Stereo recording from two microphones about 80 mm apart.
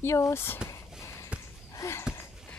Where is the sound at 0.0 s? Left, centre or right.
Left.